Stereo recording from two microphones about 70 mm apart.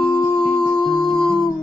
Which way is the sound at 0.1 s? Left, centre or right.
Left.